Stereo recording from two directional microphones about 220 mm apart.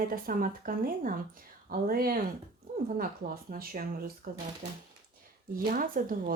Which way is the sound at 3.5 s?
40° right (ahead or behind).